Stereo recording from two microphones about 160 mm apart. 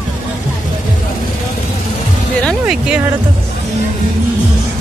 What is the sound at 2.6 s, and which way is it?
Speech, 5° right (ahead or behind).